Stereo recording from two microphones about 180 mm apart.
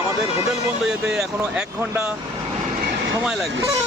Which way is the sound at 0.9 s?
5° right (ahead or behind).